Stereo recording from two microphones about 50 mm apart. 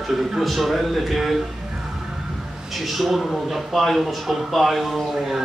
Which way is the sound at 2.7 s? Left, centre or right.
Centre.